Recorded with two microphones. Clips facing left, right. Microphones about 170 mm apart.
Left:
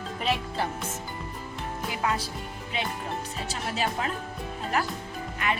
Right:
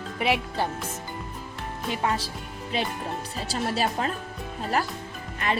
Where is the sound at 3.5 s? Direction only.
35° right (ahead or behind).